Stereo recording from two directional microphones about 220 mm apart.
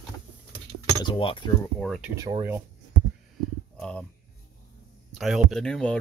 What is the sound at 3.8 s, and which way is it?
Speech, 5° left (ahead or behind).